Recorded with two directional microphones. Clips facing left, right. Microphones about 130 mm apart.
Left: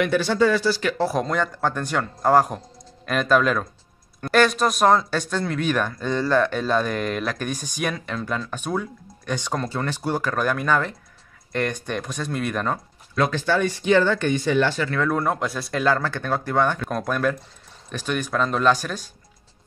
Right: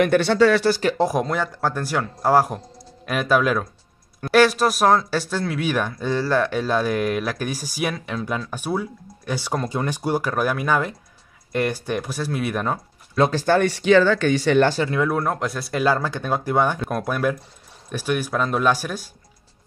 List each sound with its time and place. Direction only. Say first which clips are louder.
0.0 s speech: right 3 dB; 60° right (ahead or behind)
0.9 s speech: right 1 dB; 15° right (ahead or behind)
13.1 s speech: right 3 dB; 30° right (ahead or behind)
13.5 s speech: right 3 dB; 65° right (ahead or behind); by 14.6 s 85° right
14.9 s speech: right 2 dB; 10° right (ahead or behind)
15.1 s speech: even; centre (ahead or behind)